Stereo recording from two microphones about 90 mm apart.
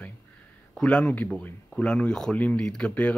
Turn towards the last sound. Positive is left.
turn(degrees=10)  # may be behind; listen again after turning